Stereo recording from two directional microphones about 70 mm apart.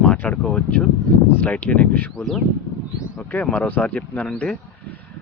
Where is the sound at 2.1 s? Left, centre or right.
Centre.